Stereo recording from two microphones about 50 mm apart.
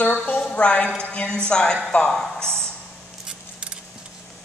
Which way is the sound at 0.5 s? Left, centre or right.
Left.